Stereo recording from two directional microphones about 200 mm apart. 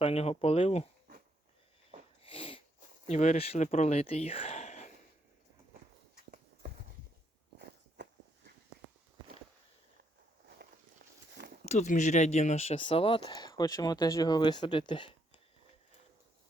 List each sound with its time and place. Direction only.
0.0 s speech: 30° left (ahead or behind)
2.2 s sneeze: 25° left (ahead or behind)
3.1 s speech: 35° left (ahead or behind)
8.0 s walk: 60° right (ahead or behind)
10.6 s walk: 50° right (ahead or behind)
11.6 s speech: 35° left (ahead or behind)